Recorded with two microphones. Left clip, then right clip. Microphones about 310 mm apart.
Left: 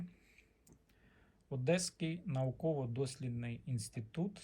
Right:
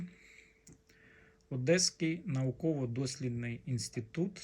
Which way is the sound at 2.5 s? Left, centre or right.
Left.